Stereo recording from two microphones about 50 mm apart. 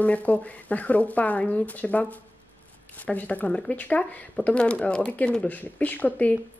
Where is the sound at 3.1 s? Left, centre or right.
Left.